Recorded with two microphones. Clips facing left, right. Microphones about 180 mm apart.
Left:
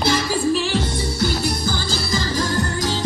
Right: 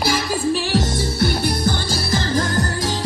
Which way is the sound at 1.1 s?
60° right (ahead or behind).